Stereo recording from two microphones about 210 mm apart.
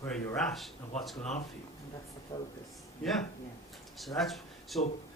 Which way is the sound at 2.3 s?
20° left (ahead or behind).